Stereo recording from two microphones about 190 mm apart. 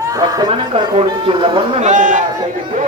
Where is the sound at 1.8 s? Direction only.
40° right (ahead or behind).